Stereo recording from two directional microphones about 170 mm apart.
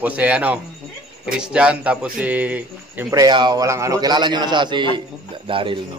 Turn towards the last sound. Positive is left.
turn(degrees=-30)  # may be behind; listen again after turning